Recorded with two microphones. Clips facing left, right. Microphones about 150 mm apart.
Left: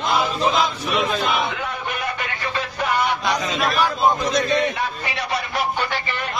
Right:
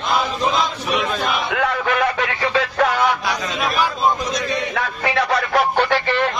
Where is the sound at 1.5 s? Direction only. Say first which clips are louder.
Right 8 dB; 90° right.